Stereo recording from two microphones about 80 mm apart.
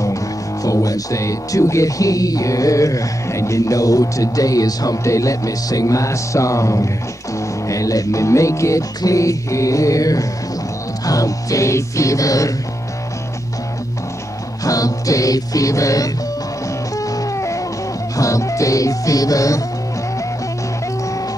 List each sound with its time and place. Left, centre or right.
0.7 s speech: left
14.6 s music: left
18.1 s speech: left